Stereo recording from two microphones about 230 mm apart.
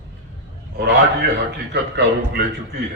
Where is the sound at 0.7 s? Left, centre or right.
Right.